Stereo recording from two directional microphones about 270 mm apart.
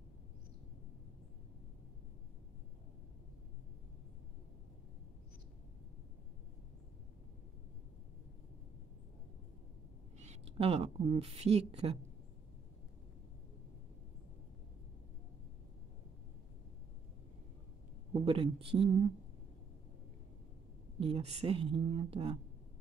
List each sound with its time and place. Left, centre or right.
10.1 s speech: right
18.1 s speech: right
21.0 s speech: right